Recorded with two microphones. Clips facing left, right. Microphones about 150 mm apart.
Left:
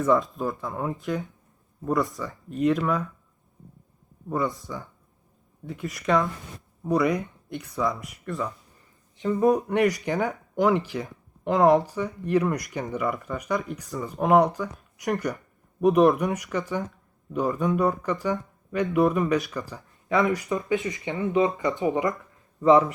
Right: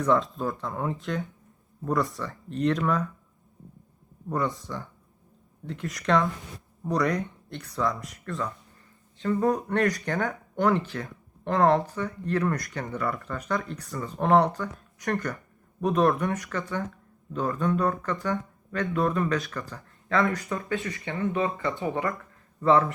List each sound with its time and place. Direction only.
0.0 s speech: 5° left (ahead or behind)
4.3 s speech: 5° left (ahead or behind)
5.6 s speech: 5° left (ahead or behind)